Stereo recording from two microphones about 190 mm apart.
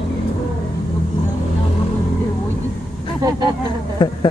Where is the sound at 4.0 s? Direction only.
25° left (ahead or behind).